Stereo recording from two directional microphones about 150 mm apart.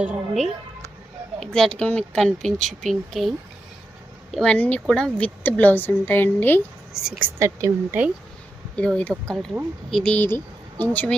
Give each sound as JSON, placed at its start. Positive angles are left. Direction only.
{"t": 0.0, "sound": "speech", "side_deg": 0}
{"t": 6.9, "sound": "speech", "side_deg": -5}
{"t": 7.3, "sound": "speech", "side_deg": -20}
{"t": 8.7, "sound": "speech", "side_deg": 10}